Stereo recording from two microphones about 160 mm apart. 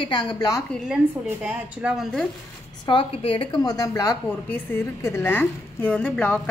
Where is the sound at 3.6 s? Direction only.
25° left (ahead or behind).